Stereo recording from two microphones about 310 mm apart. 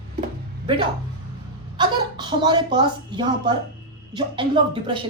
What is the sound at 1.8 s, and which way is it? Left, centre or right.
Speech, centre.